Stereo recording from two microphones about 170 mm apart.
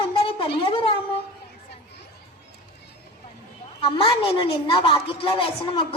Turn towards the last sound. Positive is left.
turn(degrees=30)  # may be behind; listen again after turning